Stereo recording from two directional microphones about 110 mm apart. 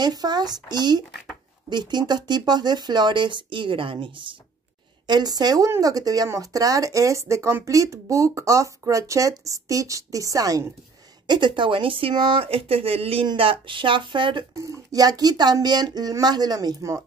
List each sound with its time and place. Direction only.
0.0 s speech: 40° right (ahead or behind)
5.0 s speech: 40° right (ahead or behind)
11.2 s speech: 45° right (ahead or behind)
14.6 s speech: 30° right (ahead or behind)